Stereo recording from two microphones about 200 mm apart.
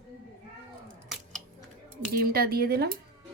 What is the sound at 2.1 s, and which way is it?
Speech, 50° right (ahead or behind).